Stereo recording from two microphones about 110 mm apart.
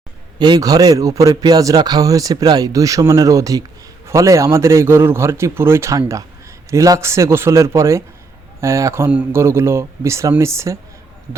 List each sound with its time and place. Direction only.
0.3 s a man's voice: 40° right (ahead or behind)